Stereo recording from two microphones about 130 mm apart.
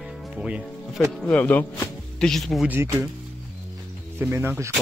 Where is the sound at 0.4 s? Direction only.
Centre (ahead or behind).